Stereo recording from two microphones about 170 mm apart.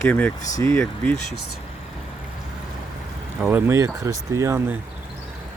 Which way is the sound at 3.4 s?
10° right (ahead or behind).